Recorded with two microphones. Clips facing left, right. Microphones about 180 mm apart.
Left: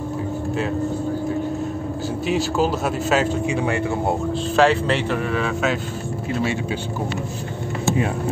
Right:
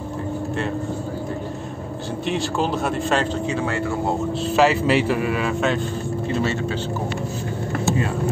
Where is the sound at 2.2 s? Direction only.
5° left (ahead or behind).